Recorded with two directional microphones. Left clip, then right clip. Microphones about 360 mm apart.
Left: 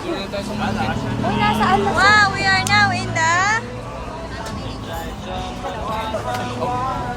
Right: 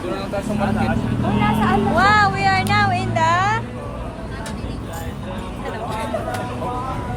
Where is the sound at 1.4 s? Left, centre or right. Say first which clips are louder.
Left 3 dB; left.